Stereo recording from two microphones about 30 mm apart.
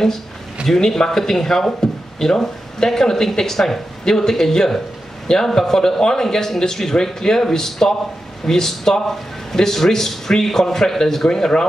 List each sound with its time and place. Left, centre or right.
0.7 s speech: centre